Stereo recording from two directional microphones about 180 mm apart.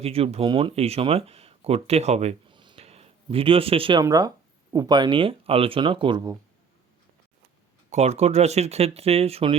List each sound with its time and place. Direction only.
0.0 s speech: 35° right (ahead or behind)
2.6 s a sound: 30° right (ahead or behind)
4.0 s speech: 20° right (ahead or behind)
7.9 s speech: 40° right (ahead or behind)